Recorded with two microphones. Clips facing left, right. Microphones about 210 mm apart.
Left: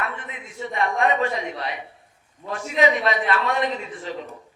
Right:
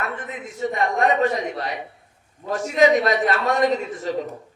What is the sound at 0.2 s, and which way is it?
A man's voice, 45° right (ahead or behind).